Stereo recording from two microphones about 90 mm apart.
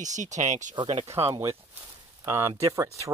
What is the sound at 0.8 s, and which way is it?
Speech, 55° right (ahead or behind).